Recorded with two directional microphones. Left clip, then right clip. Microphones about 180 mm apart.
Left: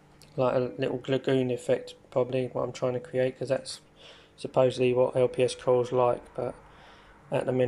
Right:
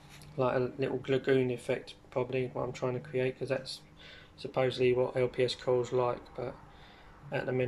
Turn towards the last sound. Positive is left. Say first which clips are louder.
# left 6 dB
turn(degrees=15)  # may be behind; listen again after turning